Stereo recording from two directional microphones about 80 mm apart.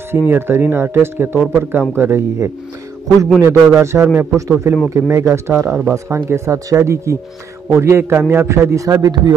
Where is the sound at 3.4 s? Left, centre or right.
Right.